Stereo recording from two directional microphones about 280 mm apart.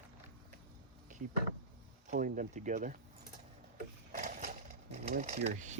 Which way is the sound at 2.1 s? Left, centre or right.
Right.